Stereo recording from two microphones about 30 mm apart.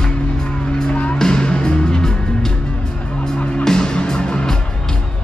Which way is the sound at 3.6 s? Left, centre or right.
Left.